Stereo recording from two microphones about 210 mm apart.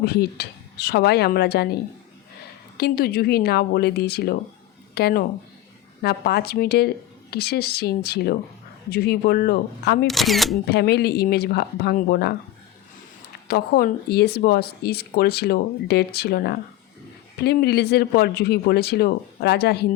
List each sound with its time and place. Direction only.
0.0 s speech: 50° left (ahead or behind)
10.1 s speech: centre (ahead or behind)
10.7 s speech: 50° left (ahead or behind)
13.5 s speech: 45° left (ahead or behind)